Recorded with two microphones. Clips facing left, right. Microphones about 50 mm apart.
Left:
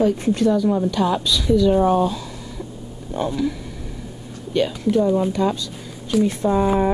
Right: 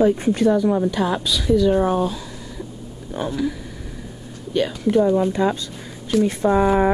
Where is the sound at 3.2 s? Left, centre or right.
Centre.